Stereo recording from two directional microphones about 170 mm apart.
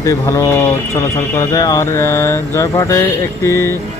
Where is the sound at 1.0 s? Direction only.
20° left (ahead or behind).